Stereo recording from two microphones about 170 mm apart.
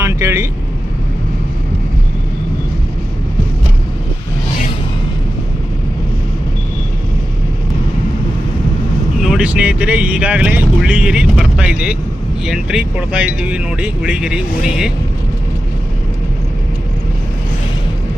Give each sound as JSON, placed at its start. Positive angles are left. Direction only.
{"t": 0.0, "sound": "vehicle", "side_deg": -15}
{"t": 9.2, "sound": "speech", "side_deg": -5}